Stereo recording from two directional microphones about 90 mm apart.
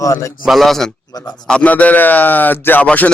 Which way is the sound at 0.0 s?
35° left (ahead or behind).